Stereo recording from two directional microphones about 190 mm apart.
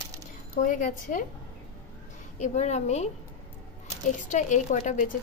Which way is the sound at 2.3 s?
40° left (ahead or behind).